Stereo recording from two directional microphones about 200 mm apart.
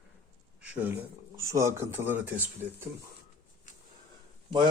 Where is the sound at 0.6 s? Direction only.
5° right (ahead or behind).